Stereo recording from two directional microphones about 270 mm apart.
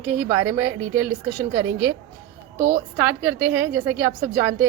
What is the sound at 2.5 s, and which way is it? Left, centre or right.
Speech, right.